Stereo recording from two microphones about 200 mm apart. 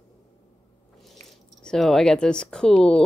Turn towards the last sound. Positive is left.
turn(degrees=5)  # may be behind; listen again after turning